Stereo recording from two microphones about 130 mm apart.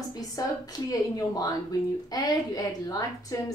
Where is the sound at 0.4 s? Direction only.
25° left (ahead or behind).